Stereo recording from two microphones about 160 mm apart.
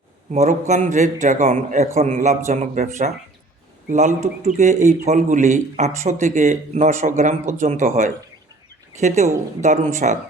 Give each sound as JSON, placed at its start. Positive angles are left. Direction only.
{"t": 0.7, "sound": "a man's voice", "side_deg": -50}